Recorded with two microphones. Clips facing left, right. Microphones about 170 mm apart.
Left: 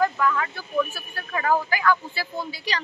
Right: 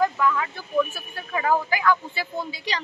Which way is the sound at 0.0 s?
10° right (ahead or behind).